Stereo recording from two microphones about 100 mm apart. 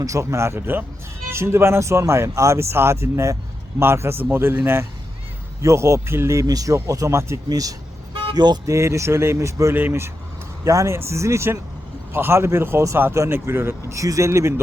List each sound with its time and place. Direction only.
0.0 s speech: 30° right (ahead or behind); by 8.5 s 45° right (ahead or behind)
8.6 s speech: 30° right (ahead or behind)